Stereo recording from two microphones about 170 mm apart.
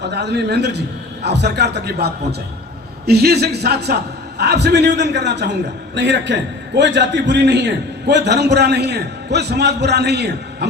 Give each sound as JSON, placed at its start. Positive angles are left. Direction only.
{"t": 0.0, "sound": "a man's voice", "side_deg": -85}